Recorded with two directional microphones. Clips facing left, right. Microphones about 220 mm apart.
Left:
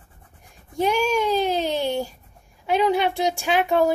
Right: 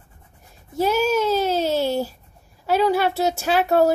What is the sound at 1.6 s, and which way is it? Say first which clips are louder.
Speech: right 3 dB; 5° right (ahead or behind).